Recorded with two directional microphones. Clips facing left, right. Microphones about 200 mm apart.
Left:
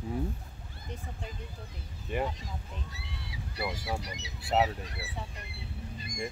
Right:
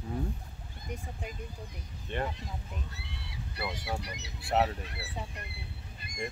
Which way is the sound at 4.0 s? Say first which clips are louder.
Left 1 dB; 60° right (ahead or behind).